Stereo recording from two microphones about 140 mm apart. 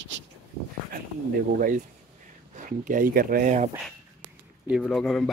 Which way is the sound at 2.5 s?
65° right (ahead or behind).